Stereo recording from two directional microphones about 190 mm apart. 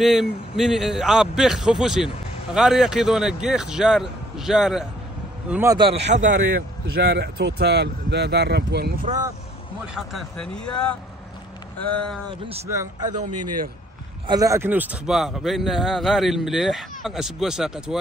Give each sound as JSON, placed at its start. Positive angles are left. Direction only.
{"t": 0.0, "sound": "a man's voice", "side_deg": 0}
{"t": 6.1, "sound": "speech", "side_deg": -45}
{"t": 9.9, "sound": "a man's voice", "side_deg": 0}
{"t": 12.3, "sound": "a man's voice", "side_deg": -30}
{"t": 14.2, "sound": "a man's voice", "side_deg": -20}